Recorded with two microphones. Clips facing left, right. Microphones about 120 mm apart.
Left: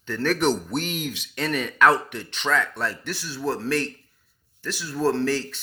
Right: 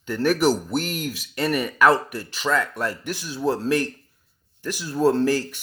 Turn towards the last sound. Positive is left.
turn(degrees=-10)  # may be behind; listen again after turning